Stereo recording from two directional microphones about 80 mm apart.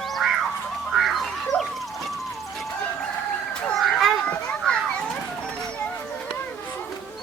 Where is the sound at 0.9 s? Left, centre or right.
Centre.